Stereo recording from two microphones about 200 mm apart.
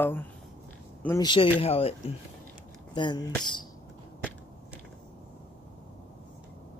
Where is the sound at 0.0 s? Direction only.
10° left (ahead or behind).